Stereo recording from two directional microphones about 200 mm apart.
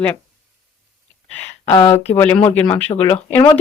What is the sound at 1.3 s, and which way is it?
Speech, 15° left (ahead or behind).